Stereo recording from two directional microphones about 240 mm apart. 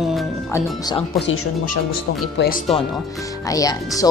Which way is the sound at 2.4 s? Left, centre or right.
Left.